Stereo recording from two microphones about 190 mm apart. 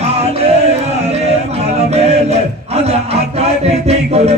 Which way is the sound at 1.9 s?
35° right (ahead or behind).